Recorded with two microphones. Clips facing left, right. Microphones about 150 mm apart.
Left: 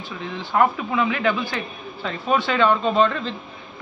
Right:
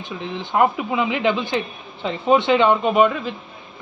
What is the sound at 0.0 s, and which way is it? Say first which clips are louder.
Speech: right 2 dB; 20° right (ahead or behind).